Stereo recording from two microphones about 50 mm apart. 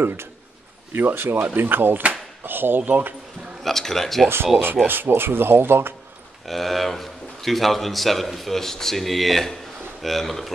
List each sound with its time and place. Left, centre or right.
0.0 s speech: right
3.6 s a man's voice: centre
4.8 s speech: right
6.4 s a man's voice: centre